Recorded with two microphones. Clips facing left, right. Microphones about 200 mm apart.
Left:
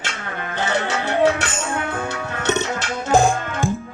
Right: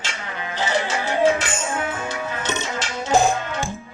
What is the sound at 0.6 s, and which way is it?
Music, 60° left (ahead or behind).